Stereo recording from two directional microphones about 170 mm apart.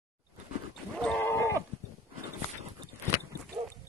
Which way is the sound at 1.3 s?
15° left (ahead or behind).